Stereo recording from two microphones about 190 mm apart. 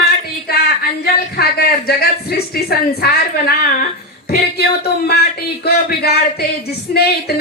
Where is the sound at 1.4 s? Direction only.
55° left (ahead or behind).